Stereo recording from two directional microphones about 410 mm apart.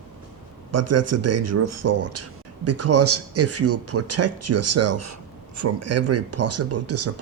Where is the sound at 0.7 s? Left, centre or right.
Right.